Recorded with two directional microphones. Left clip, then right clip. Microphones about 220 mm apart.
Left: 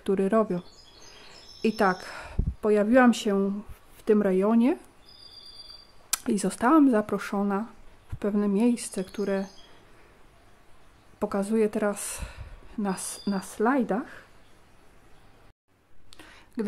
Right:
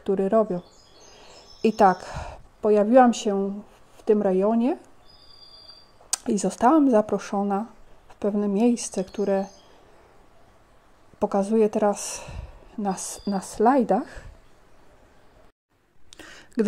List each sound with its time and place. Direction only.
0.0 s speech: 5° left (ahead or behind)
6.0 s speech: centre (ahead or behind)
11.1 s speech: centre (ahead or behind)
16.1 s a sound: 20° right (ahead or behind)